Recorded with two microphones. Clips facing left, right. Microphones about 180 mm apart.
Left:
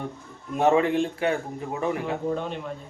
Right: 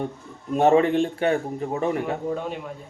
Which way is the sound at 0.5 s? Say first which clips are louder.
Right 3 dB; 35° right (ahead or behind).